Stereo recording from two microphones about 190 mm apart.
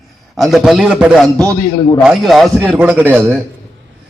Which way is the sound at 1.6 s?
25° left (ahead or behind).